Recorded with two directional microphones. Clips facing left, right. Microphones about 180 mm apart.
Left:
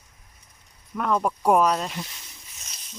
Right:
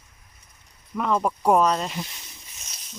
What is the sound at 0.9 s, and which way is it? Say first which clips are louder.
Speech: right 1 dB; centre (ahead or behind).